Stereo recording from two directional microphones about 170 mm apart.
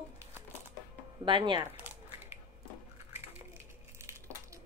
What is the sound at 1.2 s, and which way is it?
Speech, 30° right (ahead or behind).